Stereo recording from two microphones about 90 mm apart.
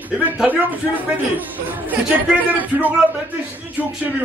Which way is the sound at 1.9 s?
20° right (ahead or behind).